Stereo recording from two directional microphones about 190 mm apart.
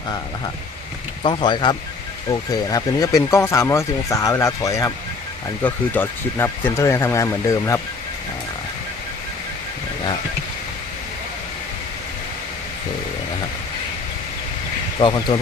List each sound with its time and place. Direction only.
1.2 s speech: 25° left (ahead or behind)
14.9 s speech: 25° left (ahead or behind)